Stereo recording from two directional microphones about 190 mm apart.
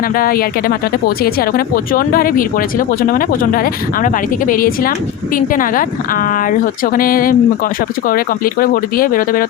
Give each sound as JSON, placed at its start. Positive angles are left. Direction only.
{"t": 0.2, "sound": "speech", "side_deg": 50}